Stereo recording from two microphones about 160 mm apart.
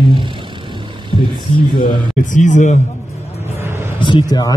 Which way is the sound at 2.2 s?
50° left (ahead or behind).